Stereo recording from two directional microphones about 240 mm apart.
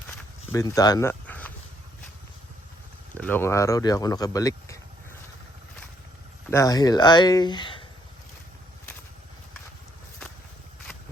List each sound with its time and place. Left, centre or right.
0.1 s walk: centre
3.2 s speech: centre
6.5 s speech: centre